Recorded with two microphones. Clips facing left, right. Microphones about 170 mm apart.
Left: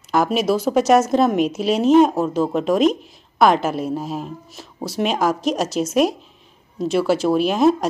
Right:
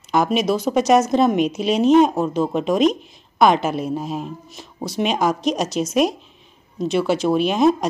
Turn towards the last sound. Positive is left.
turn(degrees=5)  # may be behind; listen again after turning